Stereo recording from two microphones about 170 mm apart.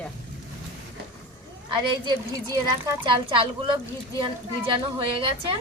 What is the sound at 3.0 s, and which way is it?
A woman's voice, 30° right (ahead or behind).